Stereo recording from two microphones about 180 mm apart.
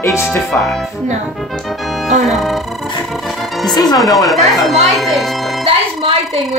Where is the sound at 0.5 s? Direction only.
Centre (ahead or behind).